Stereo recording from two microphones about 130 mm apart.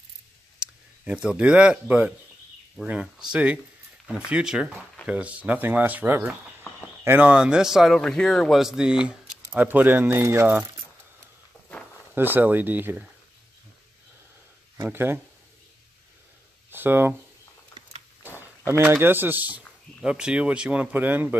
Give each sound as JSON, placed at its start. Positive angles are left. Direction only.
{"t": 0.6, "sound": "a man's voice", "side_deg": -10}
{"t": 12.2, "sound": "speech", "side_deg": -15}
{"t": 14.8, "sound": "speech", "side_deg": -15}
{"t": 16.7, "sound": "speech", "side_deg": -15}
{"t": 18.2, "sound": "a sound", "side_deg": 15}
{"t": 18.7, "sound": "speech", "side_deg": -20}